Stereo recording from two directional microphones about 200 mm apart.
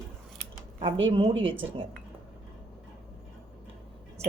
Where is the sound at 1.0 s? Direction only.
25° right (ahead or behind).